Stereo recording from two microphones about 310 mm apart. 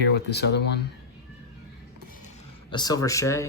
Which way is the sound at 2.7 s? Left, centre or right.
Centre.